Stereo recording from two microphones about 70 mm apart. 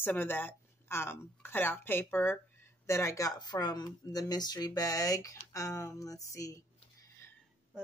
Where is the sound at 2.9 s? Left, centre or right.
Left.